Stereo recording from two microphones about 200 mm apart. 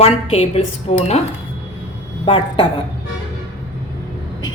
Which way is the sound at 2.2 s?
25° left (ahead or behind).